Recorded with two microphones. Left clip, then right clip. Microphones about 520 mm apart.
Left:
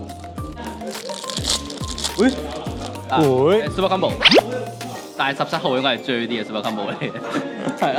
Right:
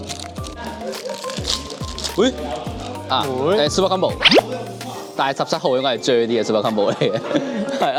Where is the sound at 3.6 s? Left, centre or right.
Right.